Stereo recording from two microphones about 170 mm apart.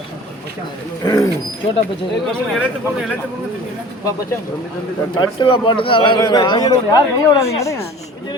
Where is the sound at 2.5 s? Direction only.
5° right (ahead or behind).